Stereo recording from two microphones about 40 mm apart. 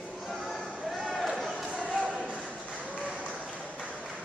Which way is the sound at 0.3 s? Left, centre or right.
Centre.